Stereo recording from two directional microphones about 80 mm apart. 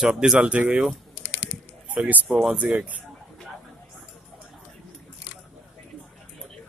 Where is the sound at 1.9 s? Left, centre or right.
Centre.